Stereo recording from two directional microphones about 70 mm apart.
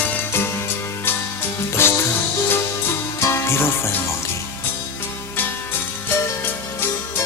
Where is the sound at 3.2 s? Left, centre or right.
Left.